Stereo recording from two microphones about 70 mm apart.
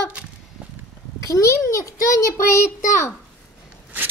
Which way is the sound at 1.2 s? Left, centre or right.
Left.